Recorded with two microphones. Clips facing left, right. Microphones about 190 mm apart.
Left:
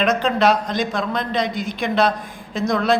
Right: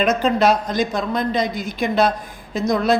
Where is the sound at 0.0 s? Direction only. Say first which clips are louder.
Right 1 dB; centre (ahead or behind).